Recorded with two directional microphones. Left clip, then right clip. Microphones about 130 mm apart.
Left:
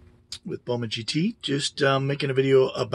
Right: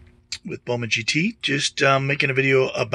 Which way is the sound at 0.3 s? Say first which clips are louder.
Right 3 dB; 10° right (ahead or behind).